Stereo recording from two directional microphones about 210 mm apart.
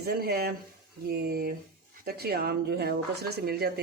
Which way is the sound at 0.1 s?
45° right (ahead or behind).